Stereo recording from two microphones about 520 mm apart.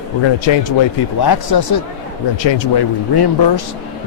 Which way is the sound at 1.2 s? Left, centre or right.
Left.